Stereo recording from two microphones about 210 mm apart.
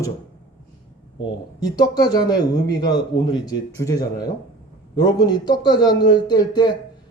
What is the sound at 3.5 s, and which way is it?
A man's voice, 15° left (ahead or behind).